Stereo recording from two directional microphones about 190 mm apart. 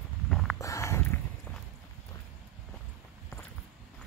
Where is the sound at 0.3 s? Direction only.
Centre (ahead or behind).